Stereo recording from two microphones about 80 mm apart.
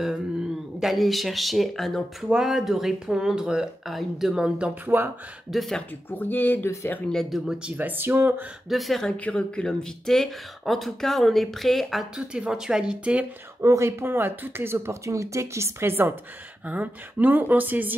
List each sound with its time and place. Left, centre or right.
0.7 s speech: centre
2.2 s speech: centre
4.8 s speech: right
5.5 s speech: centre
6.0 s speech: left
7.1 s speech: centre
7.5 s speech: centre
8.6 s speech: centre
9.1 s speech: centre
13.6 s speech: right